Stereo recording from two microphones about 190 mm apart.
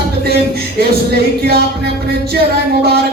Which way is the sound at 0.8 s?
55° right (ahead or behind).